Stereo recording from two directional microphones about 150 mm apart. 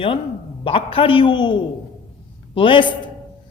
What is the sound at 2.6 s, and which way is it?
Speech, 35° left (ahead or behind).